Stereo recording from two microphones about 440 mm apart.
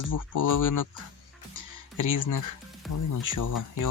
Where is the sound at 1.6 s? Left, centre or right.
Left.